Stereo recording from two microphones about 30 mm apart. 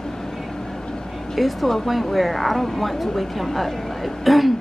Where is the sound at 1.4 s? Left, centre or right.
Centre.